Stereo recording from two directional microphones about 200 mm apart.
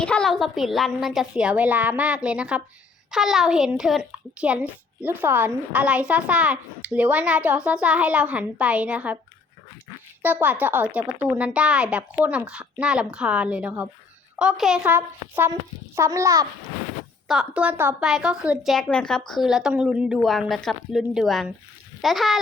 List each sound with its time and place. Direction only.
0.0 s a woman's voice: 5° left (ahead or behind)
10.2 s a child's voice: 10° right (ahead or behind)
17.2 s a woman's voice: 5° right (ahead or behind)